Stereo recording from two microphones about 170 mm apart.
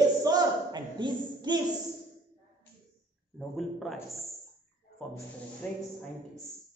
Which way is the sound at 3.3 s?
Centre (ahead or behind).